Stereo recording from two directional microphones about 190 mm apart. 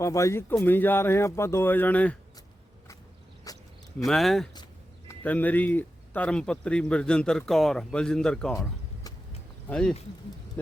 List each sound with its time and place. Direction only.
0.0 s speech: 15° left (ahead or behind)
3.5 s cricket: 20° left (ahead or behind)
4.0 s speech: centre (ahead or behind)
9.6 s speech: 5° left (ahead or behind)